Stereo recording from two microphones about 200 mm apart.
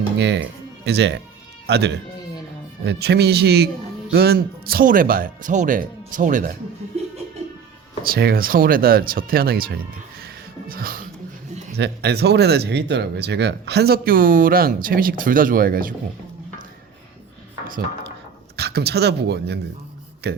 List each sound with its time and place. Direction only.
0.2 s speech: 60° right (ahead or behind); by 6.6 s 45° right (ahead or behind)
8.0 s speech: 50° right (ahead or behind)
10.2 s a sound: 45° right (ahead or behind)
11.8 s speech: 55° right (ahead or behind)
18.5 s speech: 55° right (ahead or behind)